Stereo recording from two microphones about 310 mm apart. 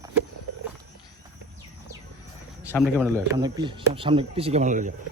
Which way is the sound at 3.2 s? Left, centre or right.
Centre.